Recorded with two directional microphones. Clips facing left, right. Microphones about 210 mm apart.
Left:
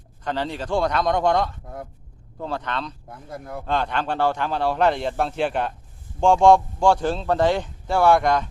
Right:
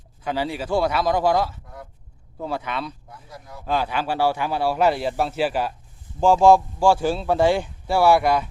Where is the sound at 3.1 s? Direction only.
55° left (ahead or behind).